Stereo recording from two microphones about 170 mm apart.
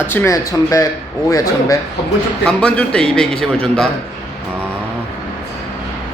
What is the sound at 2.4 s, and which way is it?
A man's voice, 5° left (ahead or behind).